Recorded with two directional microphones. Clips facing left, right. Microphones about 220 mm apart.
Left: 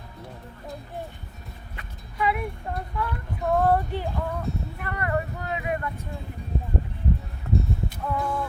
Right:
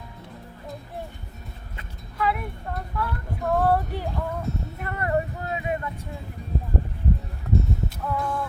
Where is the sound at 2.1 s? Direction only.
Centre (ahead or behind).